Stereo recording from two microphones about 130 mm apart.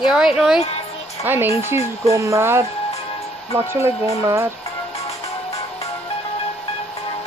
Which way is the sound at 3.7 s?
20° right (ahead or behind).